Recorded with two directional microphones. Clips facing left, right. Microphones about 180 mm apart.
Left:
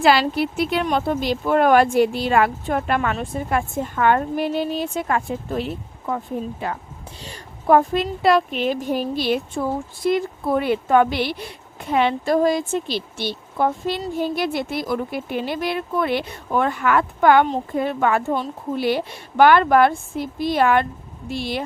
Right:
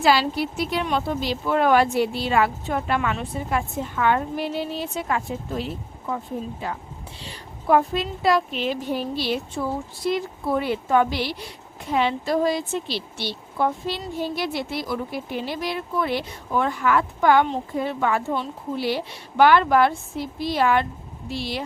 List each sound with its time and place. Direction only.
0.0 s a woman's voice: 60° left (ahead or behind)
7.2 s a woman's voice: 45° left (ahead or behind)